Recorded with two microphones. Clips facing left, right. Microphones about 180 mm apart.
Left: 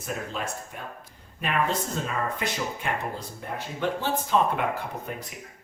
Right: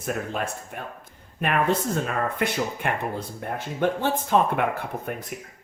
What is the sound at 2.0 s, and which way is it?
Speech, 60° right (ahead or behind).